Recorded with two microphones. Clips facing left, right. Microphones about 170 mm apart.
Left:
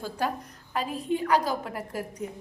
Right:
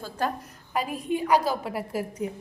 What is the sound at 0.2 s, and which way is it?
Speech, 10° left (ahead or behind).